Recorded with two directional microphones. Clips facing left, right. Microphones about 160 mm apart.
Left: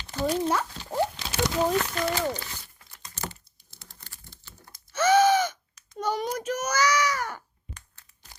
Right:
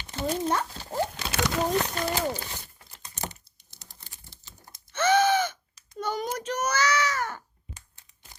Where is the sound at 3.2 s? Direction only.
20° right (ahead or behind).